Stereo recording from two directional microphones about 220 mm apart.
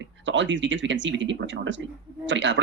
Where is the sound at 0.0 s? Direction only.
55° right (ahead or behind).